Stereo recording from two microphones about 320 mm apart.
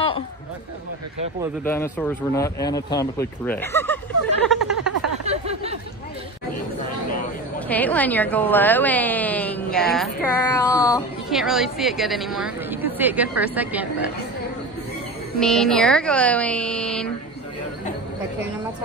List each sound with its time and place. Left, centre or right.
1.6 s speech: centre
5.2 s a sound: centre
7.6 s a woman's voice: centre
11.2 s a woman's voice: centre
15.4 s a woman's voice: centre